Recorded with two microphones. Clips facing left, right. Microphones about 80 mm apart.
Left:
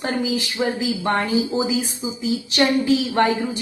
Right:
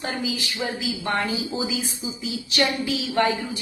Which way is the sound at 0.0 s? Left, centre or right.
Left.